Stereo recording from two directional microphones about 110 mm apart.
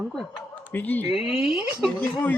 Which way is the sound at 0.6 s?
15° left (ahead or behind).